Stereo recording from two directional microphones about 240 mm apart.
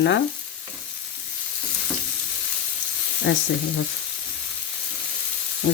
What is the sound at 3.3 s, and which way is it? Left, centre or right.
Frying, left.